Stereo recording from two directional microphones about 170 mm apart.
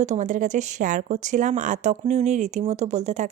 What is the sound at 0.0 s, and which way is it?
Speech, 45° right (ahead or behind).